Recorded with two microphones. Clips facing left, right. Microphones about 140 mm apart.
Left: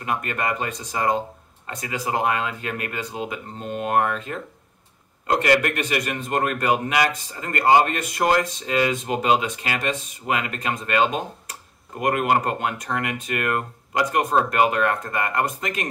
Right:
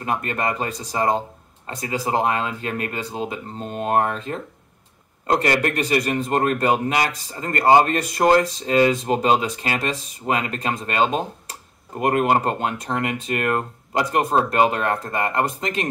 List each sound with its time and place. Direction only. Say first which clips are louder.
0.0 s a man's voice: right 2 dB; 30° right (ahead or behind)